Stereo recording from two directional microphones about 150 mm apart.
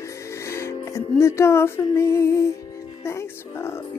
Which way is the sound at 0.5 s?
15° left (ahead or behind).